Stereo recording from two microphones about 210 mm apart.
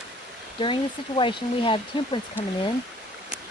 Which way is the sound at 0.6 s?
25° left (ahead or behind).